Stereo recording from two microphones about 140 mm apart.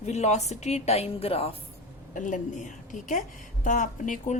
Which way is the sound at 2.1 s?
65° left (ahead or behind).